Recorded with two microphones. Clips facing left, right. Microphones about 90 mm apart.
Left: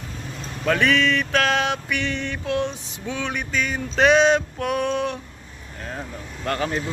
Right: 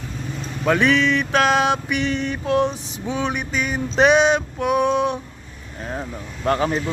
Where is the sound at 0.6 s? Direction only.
20° right (ahead or behind).